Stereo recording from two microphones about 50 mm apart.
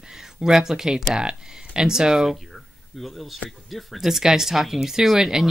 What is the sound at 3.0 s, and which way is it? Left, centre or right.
Speech, centre.